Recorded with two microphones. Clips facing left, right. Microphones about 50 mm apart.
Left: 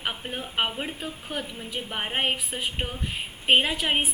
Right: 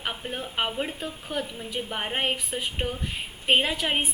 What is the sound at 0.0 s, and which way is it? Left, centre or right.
A woman's voice, centre.